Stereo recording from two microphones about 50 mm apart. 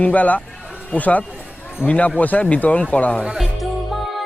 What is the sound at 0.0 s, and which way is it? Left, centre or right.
Speech, left.